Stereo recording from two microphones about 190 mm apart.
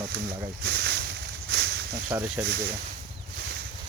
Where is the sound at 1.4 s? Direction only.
60° right (ahead or behind).